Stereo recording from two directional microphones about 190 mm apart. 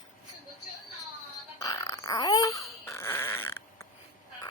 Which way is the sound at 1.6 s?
15° left (ahead or behind).